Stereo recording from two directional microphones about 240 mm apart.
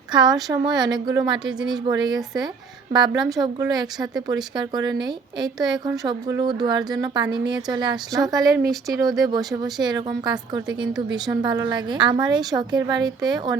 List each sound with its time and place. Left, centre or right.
0.1 s a woman's voice: centre
1.5 s speech: centre
1.9 s a woman's voice: centre
9.4 s speech: centre
9.8 s a woman's voice: centre